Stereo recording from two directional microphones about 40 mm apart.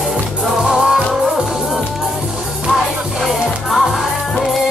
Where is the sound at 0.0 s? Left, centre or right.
Centre.